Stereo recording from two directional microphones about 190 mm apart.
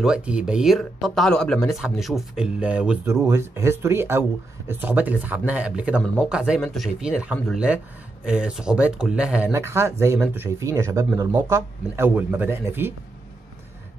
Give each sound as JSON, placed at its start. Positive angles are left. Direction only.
{"t": 0.0, "sound": "speech", "side_deg": -5}